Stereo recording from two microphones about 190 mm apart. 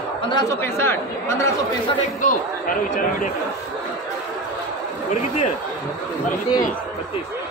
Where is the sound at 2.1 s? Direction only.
45° left (ahead or behind).